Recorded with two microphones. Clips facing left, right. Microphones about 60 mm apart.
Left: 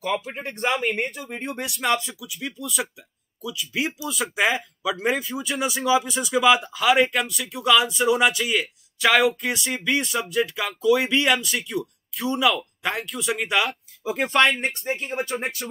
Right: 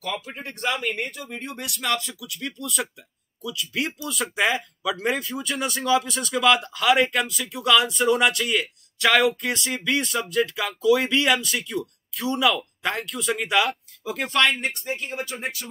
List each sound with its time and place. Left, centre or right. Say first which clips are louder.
0.0 s speech: left 5 dB; left
0.7 s speech: left 2 dB; centre
14.8 s speech: left 3 dB; left